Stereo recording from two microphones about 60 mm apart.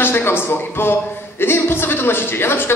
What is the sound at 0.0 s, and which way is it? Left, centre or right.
A man's voice, left.